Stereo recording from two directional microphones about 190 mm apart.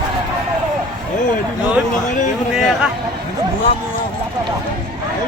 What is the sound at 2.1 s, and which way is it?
Speech, 40° left (ahead or behind).